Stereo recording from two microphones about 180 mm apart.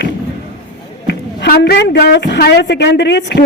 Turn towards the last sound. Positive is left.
turn(degrees=70)  # may be behind; listen again after turning